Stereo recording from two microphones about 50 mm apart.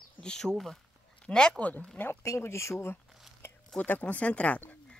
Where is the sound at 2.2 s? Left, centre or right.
Left.